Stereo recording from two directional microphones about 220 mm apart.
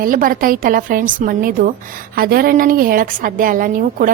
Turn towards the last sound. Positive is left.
turn(degrees=-40)  # may be behind; listen again after turning